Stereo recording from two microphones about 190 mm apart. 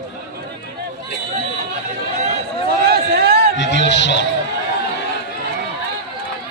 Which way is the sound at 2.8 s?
55° right (ahead or behind).